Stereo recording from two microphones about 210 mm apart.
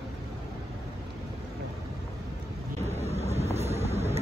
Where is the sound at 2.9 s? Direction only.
30° right (ahead or behind).